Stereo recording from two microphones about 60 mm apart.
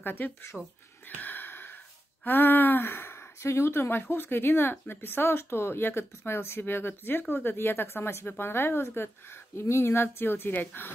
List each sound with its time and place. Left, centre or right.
0.0 s speech: left
1.0 s a sound: left
2.2 s speech: left